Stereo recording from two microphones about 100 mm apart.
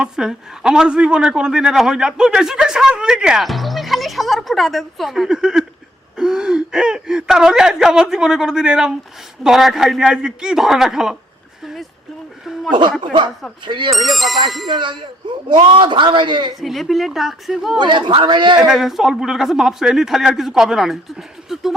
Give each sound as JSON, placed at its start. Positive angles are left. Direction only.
{"t": 0.0, "sound": "a man's voice", "side_deg": -5}
{"t": 11.6, "sound": "a sound", "side_deg": 0}
{"t": 13.0, "sound": "a man's voice", "side_deg": -55}
{"t": 13.9, "sound": "a man's voice", "side_deg": 0}
{"t": 14.7, "sound": "a man's voice", "side_deg": -55}
{"t": 16.6, "sound": "a man's voice", "side_deg": 0}
{"t": 17.7, "sound": "a man's voice", "side_deg": -50}
{"t": 18.6, "sound": "a man's voice", "side_deg": -5}